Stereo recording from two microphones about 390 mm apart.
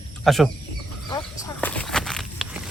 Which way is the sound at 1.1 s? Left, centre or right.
Centre.